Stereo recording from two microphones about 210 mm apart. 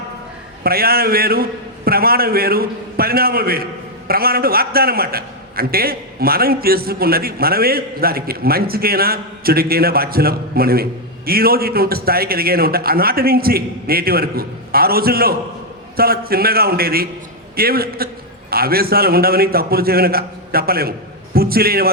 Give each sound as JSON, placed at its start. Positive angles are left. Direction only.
{"t": 0.6, "sound": "a man's voice", "side_deg": -45}